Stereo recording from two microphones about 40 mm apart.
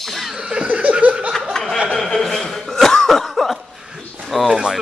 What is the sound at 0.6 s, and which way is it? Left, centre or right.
Laughter, right.